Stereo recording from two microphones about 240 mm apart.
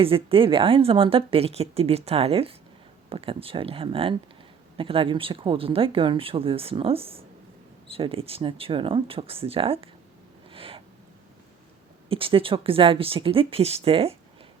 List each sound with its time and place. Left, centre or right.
0.0 s speech: right
10.5 s owl: right
12.0 s speech: right